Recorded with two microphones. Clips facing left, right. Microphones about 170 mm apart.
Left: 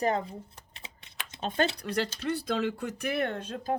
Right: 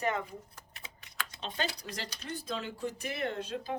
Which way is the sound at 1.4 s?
50° left (ahead or behind).